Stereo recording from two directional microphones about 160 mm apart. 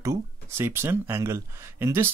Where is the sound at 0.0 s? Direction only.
15° right (ahead or behind).